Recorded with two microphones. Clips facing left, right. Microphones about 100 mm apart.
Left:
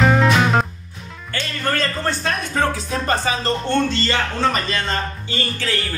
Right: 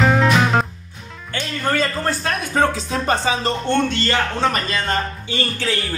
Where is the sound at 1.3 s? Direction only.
10° right (ahead or behind).